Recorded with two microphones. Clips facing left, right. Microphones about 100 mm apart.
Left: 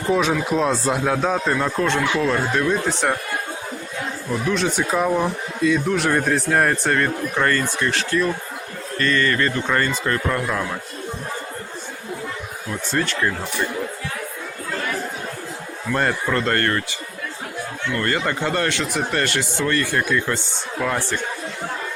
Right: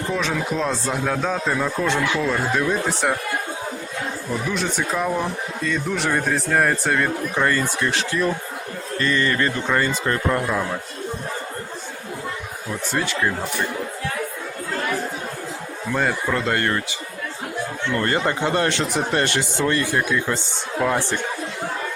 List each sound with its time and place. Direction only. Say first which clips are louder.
0.1 s speech: left 6 dB; 5° left (ahead or behind)
1.5 s speech: left 1 dB; 5° right (ahead or behind)
4.4 s speech: left 5 dB; centre (ahead or behind); by 10.4 s 20° right (ahead or behind)
12.9 s speech: left 1 dB; 10° right (ahead or behind)
15.9 s speech: left 1 dB; 5° right (ahead or behind)
17.9 s speech: right 1 dB; 25° right (ahead or behind)